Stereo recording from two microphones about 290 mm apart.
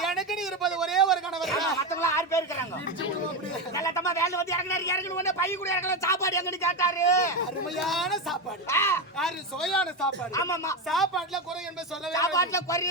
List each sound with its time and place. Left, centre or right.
0.0 s a sound: centre
3.8 s a man's voice: centre
10.8 s speech: centre
12.1 s a man's voice: centre